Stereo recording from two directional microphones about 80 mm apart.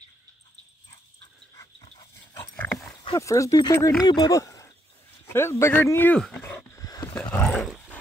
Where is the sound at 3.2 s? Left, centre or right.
Left.